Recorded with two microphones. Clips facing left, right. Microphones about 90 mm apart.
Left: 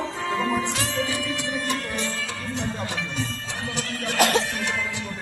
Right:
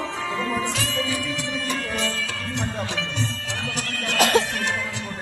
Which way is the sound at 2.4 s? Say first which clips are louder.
Right 1 dB; 80° right.